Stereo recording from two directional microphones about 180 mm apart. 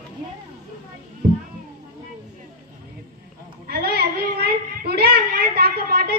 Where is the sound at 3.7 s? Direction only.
60° right (ahead or behind).